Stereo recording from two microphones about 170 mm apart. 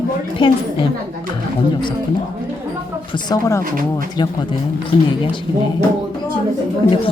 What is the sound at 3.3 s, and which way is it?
Speech, 20° left (ahead or behind).